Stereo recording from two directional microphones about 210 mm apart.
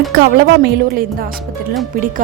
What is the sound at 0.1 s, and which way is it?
A woman's voice, 50° right (ahead or behind).